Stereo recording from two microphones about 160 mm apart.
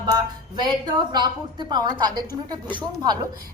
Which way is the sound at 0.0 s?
25° right (ahead or behind).